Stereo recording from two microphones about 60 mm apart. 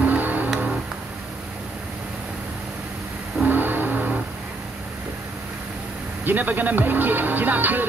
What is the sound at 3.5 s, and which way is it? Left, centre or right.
Vehicle, right.